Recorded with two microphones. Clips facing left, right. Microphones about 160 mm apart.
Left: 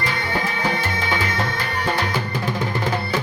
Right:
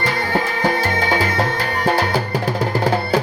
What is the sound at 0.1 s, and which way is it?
Music, 40° right (ahead or behind).